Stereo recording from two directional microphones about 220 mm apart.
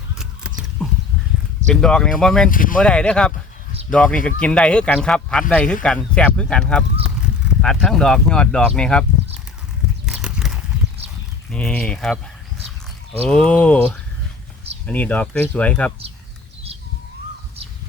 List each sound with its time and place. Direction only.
0.1 s a sound: 5° right (ahead or behind)
1.7 s speech: 5° left (ahead or behind)
2.5 s speech: 40° left (ahead or behind)
2.7 s speech: 5° left (ahead or behind)
10.1 s clip-clop: 5° right (ahead or behind)
11.5 s speech: 5° left (ahead or behind)
13.2 s speech: 5° left (ahead or behind)